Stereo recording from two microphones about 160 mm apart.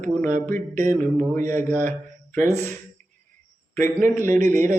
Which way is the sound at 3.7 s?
55° right (ahead or behind).